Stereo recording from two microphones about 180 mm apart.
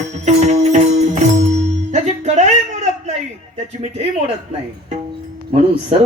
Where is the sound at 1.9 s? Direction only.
40° right (ahead or behind).